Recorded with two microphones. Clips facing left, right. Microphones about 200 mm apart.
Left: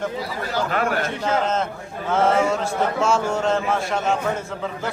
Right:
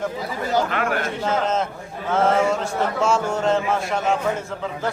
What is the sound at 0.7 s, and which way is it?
Speech, 40° left (ahead or behind).